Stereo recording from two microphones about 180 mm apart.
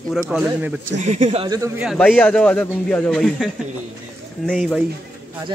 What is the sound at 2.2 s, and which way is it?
Speech, 5° left (ahead or behind).